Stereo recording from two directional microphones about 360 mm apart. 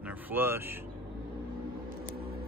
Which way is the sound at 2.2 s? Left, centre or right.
Right.